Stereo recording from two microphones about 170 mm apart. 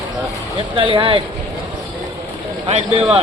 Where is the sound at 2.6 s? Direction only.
35° right (ahead or behind).